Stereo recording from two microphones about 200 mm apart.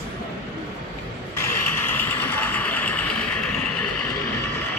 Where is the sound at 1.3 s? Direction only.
10° left (ahead or behind).